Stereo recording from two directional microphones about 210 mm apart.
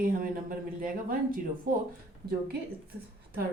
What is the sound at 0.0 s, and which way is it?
Speech, 40° right (ahead or behind).